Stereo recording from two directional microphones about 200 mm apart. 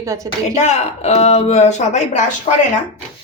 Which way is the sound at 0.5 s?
35° left (ahead or behind).